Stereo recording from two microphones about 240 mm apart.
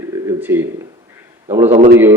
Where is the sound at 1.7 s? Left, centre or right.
Right.